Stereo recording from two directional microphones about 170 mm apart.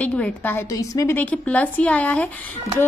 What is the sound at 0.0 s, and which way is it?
A woman's voice, 10° left (ahead or behind).